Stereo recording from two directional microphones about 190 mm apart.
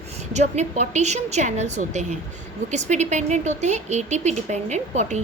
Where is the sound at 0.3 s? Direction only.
35° right (ahead or behind).